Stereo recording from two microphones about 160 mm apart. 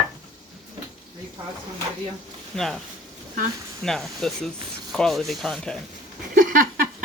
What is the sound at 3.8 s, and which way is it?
Speech, centre (ahead or behind).